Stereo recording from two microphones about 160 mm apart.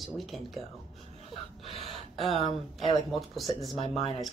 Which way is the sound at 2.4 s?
40° left (ahead or behind).